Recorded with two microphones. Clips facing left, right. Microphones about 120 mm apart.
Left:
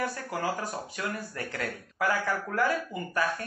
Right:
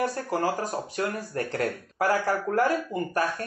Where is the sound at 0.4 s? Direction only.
35° right (ahead or behind).